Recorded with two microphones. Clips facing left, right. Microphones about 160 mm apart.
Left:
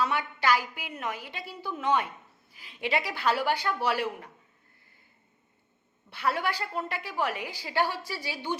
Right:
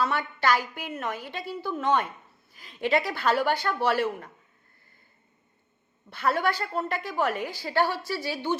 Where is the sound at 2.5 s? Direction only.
45° right (ahead or behind).